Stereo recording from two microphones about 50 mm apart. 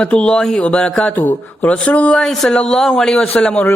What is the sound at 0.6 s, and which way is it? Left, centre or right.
Speech, left.